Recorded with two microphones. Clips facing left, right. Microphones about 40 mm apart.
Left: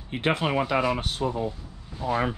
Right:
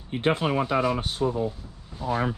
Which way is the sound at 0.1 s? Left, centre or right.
Left.